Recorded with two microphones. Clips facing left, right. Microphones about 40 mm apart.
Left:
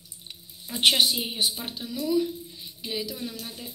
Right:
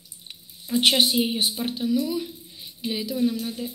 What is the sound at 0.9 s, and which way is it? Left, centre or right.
A woman's voice, centre.